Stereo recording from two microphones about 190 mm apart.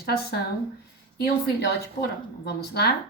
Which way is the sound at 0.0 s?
55° left (ahead or behind).